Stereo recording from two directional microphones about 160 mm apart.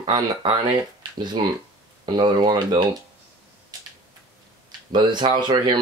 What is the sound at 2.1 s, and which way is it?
Speech, 25° right (ahead or behind).